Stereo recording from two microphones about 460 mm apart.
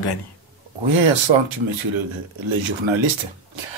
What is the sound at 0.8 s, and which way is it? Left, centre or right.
Speech, right.